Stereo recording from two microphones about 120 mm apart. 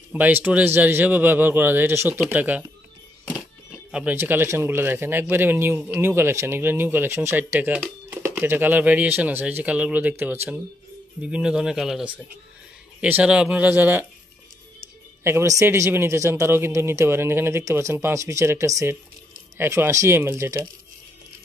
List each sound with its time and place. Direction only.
0.1 s speech: 15° right (ahead or behind)
3.3 s music: 15° left (ahead or behind)
3.9 s a man's voice: 15° right (ahead or behind)
15.2 s a man's voice: 25° right (ahead or behind)